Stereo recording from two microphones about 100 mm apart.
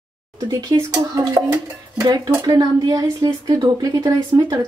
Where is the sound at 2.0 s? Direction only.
35° right (ahead or behind).